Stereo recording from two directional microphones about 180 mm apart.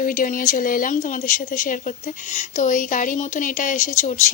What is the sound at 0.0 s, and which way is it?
A woman's voice, 50° left (ahead or behind).